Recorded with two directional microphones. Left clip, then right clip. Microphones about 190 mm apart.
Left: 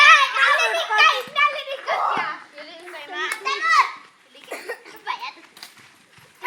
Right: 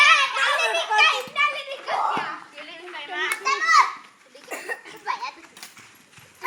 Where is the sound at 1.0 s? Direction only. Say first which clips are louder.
Left 3 dB; 10° left (ahead or behind).